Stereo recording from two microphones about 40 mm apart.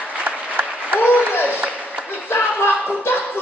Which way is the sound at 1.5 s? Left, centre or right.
Right.